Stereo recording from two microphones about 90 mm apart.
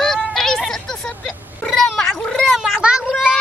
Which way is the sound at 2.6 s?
10° right (ahead or behind).